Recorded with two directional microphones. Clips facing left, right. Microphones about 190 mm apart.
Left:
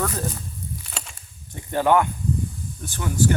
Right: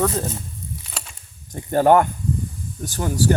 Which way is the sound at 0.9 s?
Centre (ahead or behind).